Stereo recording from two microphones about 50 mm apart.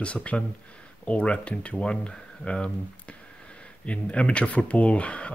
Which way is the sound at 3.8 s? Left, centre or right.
Left.